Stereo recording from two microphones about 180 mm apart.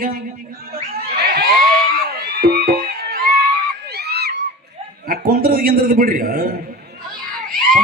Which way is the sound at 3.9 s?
65° right (ahead or behind).